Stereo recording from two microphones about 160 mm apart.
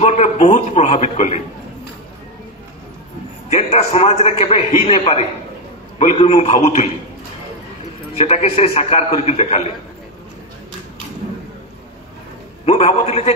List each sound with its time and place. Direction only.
0.0 s a man's voice: 45° left (ahead or behind)
3.4 s a man's voice: 45° left (ahead or behind)
8.2 s a man's voice: 40° left (ahead or behind)
12.6 s a man's voice: 40° left (ahead or behind)